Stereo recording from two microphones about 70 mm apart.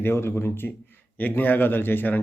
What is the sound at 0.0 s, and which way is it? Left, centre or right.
Speech, left.